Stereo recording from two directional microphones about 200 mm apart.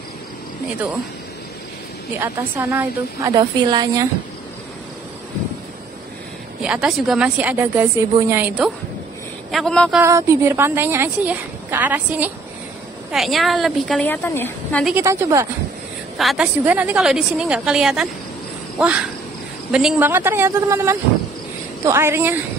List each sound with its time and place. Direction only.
2.1 s a woman's voice: 15° right (ahead or behind)
6.6 s speech: 5° right (ahead or behind)
9.9 s a woman's voice: 15° right (ahead or behind); by 15.0 s 5° left (ahead or behind)
15.0 s a woman's voice: 15° right (ahead or behind)
16.2 s speech: centre (ahead or behind)
19.7 s a woman's voice: 5° right (ahead or behind)